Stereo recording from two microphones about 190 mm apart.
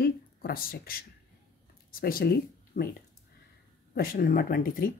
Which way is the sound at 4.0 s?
50° left (ahead or behind).